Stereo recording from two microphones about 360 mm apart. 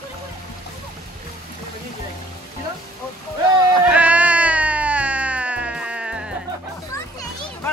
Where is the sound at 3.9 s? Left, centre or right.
Centre.